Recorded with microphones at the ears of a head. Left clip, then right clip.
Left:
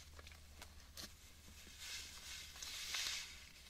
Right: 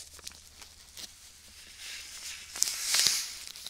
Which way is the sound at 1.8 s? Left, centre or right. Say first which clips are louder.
Right 8 dB; right.